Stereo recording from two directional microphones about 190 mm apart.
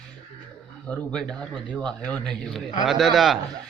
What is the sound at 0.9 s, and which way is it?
A man's voice, 5° left (ahead or behind).